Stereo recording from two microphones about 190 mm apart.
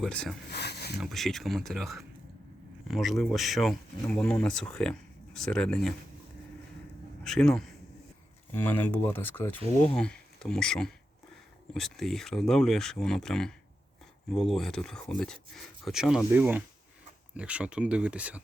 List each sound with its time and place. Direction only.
0.0 s speech: 5° left (ahead or behind)
0.5 s speech: 60° left (ahead or behind)
0.9 s speech: centre (ahead or behind)
7.3 s speech: 5° left (ahead or behind)